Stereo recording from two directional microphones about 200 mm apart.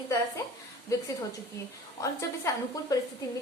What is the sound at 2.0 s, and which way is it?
Speech, 15° left (ahead or behind).